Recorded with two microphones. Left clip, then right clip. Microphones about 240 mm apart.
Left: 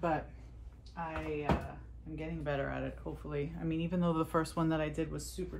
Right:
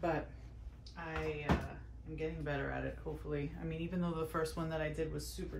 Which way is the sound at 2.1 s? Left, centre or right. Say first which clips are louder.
Left 2 dB; left.